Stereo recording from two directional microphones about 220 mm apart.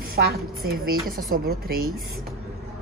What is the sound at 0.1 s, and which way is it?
A woman's voice, 45° right (ahead or behind).